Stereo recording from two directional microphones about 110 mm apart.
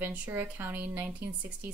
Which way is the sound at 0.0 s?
15° right (ahead or behind).